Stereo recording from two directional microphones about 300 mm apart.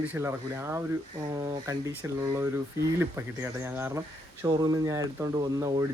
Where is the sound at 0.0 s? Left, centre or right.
Centre.